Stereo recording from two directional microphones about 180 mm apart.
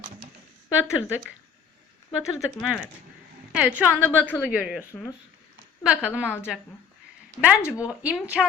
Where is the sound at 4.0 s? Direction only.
10° left (ahead or behind).